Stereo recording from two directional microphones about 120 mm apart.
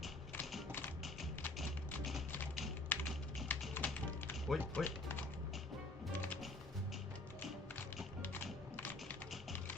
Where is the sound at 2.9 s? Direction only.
15° left (ahead or behind).